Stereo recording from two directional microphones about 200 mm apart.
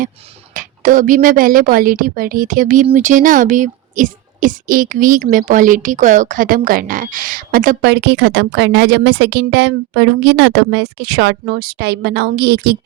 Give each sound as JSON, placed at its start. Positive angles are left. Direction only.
{"t": 0.5, "sound": "a woman's voice", "side_deg": -40}